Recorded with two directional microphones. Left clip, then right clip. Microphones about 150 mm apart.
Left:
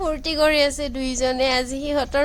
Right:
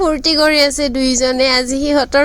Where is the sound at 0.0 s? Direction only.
40° right (ahead or behind).